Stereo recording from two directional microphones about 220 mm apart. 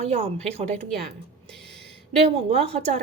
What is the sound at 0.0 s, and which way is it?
Speech, 30° right (ahead or behind).